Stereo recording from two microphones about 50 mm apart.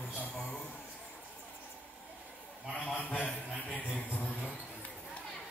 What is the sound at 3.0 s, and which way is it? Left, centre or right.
Speech, left.